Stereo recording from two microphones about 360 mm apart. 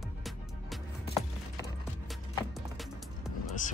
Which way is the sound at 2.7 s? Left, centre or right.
Centre.